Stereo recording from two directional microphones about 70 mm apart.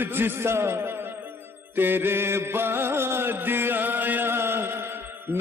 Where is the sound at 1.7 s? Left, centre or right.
Right.